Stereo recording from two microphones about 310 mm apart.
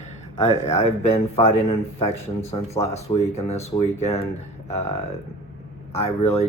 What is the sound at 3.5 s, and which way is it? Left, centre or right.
Speech, left.